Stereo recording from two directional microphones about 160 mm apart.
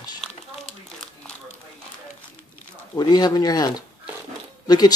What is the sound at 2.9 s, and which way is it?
Speech, 25° left (ahead or behind).